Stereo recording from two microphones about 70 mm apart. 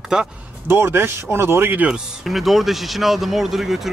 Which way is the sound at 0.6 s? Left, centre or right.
Right.